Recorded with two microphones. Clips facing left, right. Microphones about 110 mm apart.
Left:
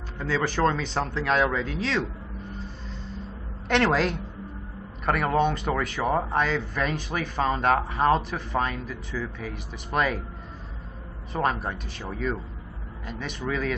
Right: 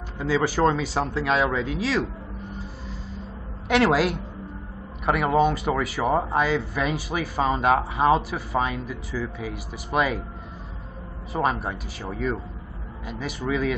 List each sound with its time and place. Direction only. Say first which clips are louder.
0.2 s speech: right 3 dB; 5° right (ahead or behind)
2.6 s vehicle: right 1 dB; 5° right (ahead or behind)
3.6 s a woman's voice: right 3 dB; 5° right (ahead or behind)
11.3 s speech: right 2 dB; centre (ahead or behind)